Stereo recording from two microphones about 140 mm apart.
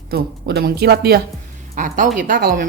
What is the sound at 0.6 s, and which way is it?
Speech, 90° right.